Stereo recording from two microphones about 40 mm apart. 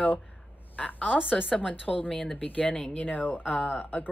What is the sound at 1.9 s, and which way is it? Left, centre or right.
Speech, left.